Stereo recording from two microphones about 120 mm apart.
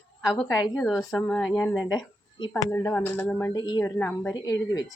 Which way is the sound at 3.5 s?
35° left (ahead or behind).